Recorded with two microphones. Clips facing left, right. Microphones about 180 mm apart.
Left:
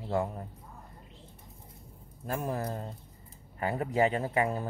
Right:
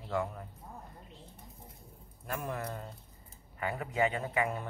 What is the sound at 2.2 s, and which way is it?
Speech, 30° left (ahead or behind).